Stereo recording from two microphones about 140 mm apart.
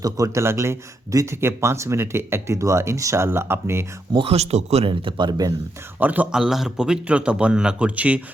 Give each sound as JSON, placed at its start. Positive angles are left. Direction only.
{"t": 0.0, "sound": "speech", "side_deg": -20}
{"t": 4.1, "sound": "speech", "side_deg": -40}
{"t": 6.0, "sound": "a man's voice", "side_deg": -10}